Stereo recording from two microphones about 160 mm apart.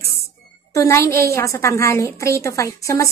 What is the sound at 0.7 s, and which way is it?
A woman's voice, 20° left (ahead or behind).